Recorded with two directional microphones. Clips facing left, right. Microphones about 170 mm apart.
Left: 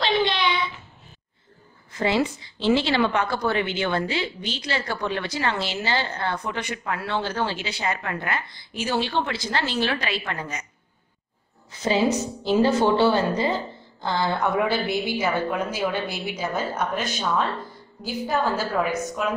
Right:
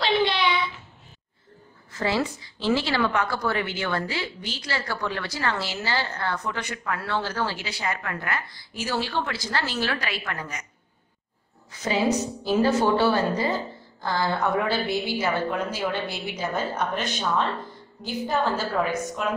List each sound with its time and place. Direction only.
0.0 s child singing: 5° right (ahead or behind)
1.9 s a woman's voice: 20° left (ahead or behind)
12.4 s a woman's voice: 25° left (ahead or behind)
18.0 s a woman's voice: 5° left (ahead or behind)